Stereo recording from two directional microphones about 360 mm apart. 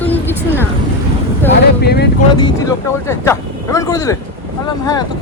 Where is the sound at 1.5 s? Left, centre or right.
Left.